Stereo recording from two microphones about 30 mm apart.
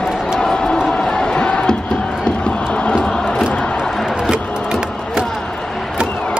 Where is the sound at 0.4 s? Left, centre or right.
Left.